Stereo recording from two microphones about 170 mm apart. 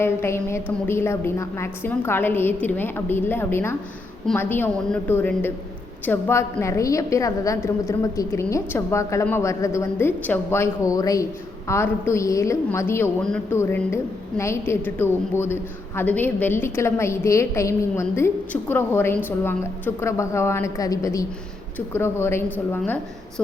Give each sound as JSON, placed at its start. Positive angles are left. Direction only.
{"t": 0.0, "sound": "a woman's voice", "side_deg": 15}